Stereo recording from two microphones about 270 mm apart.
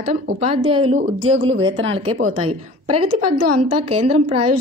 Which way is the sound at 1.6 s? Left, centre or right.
Right.